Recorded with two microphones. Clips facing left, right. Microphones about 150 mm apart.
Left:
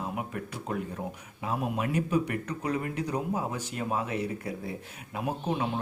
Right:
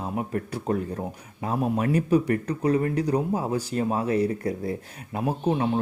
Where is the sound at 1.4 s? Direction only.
40° right (ahead or behind).